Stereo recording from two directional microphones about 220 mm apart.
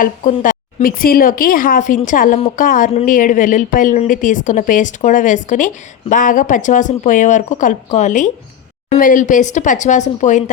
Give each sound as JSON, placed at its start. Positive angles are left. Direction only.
{"t": 0.0, "sound": "speech", "side_deg": 35}